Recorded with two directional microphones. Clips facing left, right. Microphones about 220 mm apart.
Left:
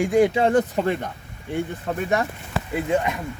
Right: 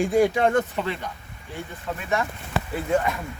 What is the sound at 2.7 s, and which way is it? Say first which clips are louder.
Speech: left 1 dB; 15° left (ahead or behind).